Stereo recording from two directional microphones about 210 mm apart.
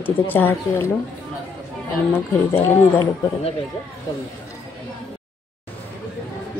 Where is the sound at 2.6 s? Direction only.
10° left (ahead or behind).